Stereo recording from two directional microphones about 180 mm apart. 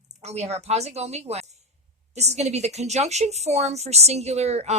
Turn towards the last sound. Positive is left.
turn(degrees=-35)  # may be behind; listen again after turning